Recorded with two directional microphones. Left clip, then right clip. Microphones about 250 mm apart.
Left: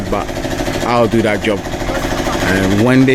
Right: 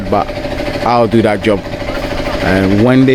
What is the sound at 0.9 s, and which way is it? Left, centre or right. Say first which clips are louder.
Speech: right 3 dB; centre.